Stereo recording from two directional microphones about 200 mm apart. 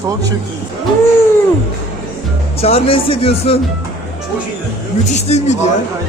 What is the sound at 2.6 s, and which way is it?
Speech, 30° left (ahead or behind).